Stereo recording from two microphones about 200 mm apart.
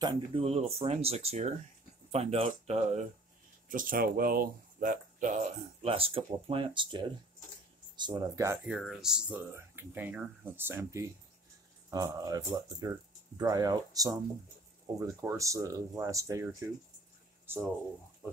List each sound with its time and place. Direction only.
0.0 s speech: 30° right (ahead or behind)
3.6 s speech: 45° right (ahead or behind); by 8.5 s 15° right (ahead or behind)
8.6 s speech: 5° right (ahead or behind)